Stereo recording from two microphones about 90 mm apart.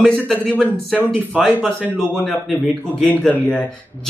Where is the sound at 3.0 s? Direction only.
15° left (ahead or behind).